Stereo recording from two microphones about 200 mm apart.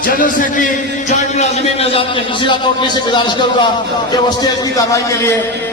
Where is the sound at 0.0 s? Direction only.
45° left (ahead or behind).